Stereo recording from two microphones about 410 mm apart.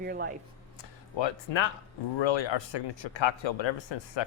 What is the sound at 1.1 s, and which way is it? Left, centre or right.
Speech, left.